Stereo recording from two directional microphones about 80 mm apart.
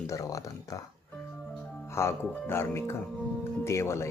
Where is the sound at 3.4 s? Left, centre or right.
Left.